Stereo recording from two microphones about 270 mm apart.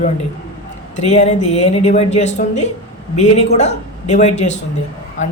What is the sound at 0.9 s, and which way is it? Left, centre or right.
A woman's voice, left.